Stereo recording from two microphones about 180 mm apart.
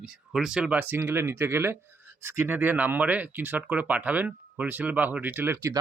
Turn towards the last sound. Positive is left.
turn(degrees=-15)  # may be behind; listen again after turning